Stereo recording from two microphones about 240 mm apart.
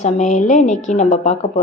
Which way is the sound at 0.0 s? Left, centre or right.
Left.